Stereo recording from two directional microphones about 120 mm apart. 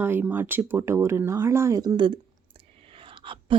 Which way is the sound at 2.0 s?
45° right (ahead or behind).